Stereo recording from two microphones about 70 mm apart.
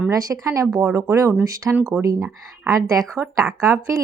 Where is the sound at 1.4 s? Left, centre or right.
Right.